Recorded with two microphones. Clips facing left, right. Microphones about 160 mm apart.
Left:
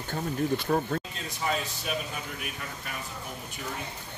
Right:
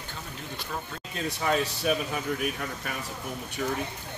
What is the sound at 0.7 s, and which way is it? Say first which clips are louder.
Speech: left 8 dB; 55° left (ahead or behind).